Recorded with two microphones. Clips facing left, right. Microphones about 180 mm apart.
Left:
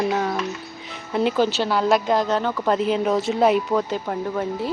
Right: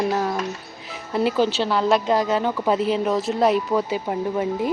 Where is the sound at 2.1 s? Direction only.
10° right (ahead or behind).